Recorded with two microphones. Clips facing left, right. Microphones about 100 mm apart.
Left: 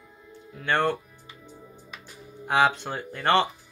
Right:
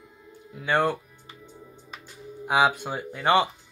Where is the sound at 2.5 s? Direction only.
10° right (ahead or behind).